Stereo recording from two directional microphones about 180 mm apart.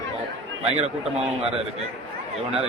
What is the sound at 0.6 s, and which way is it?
Speech, 35° right (ahead or behind).